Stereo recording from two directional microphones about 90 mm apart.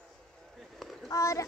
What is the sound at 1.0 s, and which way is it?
Speech, 35° left (ahead or behind).